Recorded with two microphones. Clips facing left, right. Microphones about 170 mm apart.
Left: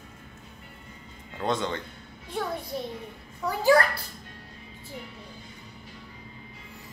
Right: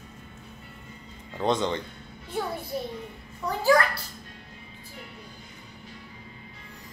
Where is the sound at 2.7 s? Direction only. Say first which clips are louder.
Right 3 dB; 5° right (ahead or behind).